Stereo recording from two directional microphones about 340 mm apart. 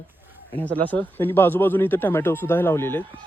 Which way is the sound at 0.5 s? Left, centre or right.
Centre.